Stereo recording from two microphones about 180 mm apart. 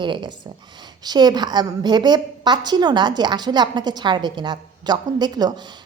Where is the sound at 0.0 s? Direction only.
25° right (ahead or behind).